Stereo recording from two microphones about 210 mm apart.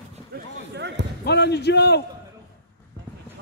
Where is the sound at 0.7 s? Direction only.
55° right (ahead or behind).